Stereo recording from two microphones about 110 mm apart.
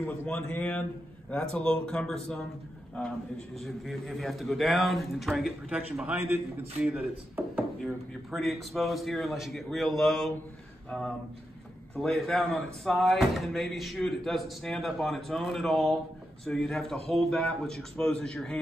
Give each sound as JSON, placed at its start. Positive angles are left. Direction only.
{"t": 0.0, "sound": "speech", "side_deg": 20}
{"t": 3.6, "sound": "speech", "side_deg": 0}
{"t": 6.1, "sound": "a man's voice", "side_deg": -20}
{"t": 7.8, "sound": "speech", "side_deg": 0}